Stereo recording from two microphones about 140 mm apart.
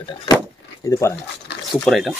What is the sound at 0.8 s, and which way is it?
Speech, 20° left (ahead or behind).